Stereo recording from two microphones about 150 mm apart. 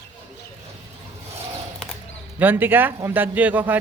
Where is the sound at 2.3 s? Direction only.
15° right (ahead or behind).